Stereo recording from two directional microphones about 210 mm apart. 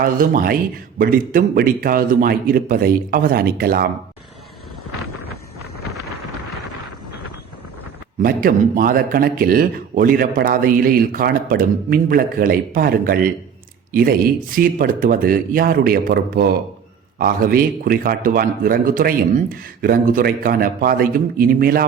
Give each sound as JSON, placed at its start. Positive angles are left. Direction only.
{"t": 0.0, "sound": "speech", "side_deg": -40}
{"t": 8.2, "sound": "speech", "side_deg": -40}
{"t": 14.5, "sound": "speech", "side_deg": -40}